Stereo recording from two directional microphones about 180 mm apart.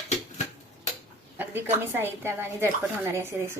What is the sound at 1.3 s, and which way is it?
A woman's voice, 10° right (ahead or behind).